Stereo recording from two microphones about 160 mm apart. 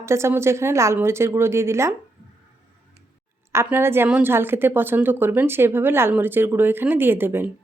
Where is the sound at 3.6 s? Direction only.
15° right (ahead or behind).